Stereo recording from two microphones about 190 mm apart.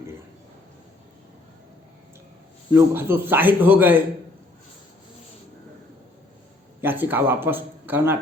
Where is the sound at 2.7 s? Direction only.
10° right (ahead or behind).